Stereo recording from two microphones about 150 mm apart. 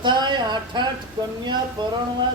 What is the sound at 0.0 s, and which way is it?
A man's voice, 30° right (ahead or behind).